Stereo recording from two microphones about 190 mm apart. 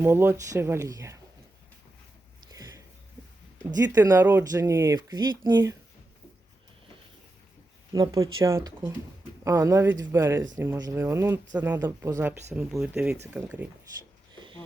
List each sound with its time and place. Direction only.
0.0 s speech: 10° right (ahead or behind)
2.5 s sniff: 20° right (ahead or behind)
3.8 s speech: 20° right (ahead or behind)
7.9 s speech: 20° right (ahead or behind); by 13.4 s 5° right (ahead or behind)
14.3 s a sound: 25° right (ahead or behind)